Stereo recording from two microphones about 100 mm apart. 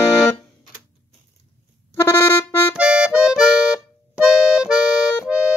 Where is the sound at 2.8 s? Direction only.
10° right (ahead or behind).